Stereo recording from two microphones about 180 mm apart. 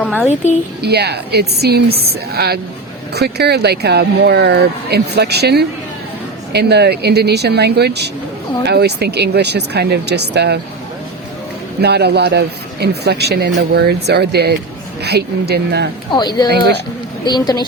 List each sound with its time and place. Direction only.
0.0 s a woman's voice: 5° left (ahead or behind)
0.8 s speech: 65° right (ahead or behind)
11.8 s speech: 65° right (ahead or behind)
16.1 s speech: 25° left (ahead or behind)